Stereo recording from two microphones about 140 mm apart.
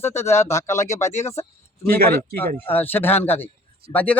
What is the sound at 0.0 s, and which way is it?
Speech, 20° left (ahead or behind).